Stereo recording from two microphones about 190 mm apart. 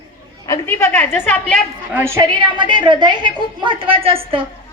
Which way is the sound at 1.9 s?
10° right (ahead or behind).